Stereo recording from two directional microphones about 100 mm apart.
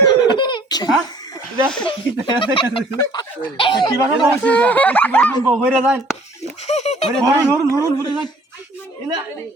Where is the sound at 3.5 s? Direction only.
55° left (ahead or behind).